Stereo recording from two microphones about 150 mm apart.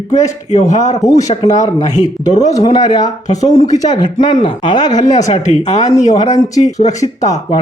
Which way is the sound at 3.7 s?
25° left (ahead or behind).